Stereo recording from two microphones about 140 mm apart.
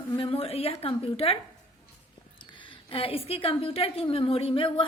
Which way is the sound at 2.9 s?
40° left (ahead or behind).